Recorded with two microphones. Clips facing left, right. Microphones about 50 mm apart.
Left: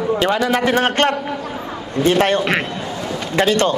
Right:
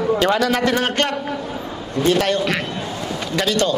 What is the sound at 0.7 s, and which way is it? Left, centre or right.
A man's voice, left.